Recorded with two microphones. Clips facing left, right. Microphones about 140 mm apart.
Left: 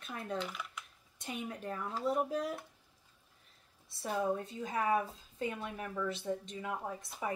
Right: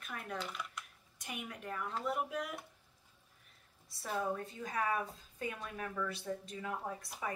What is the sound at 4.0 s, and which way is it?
Speech, 25° left (ahead or behind).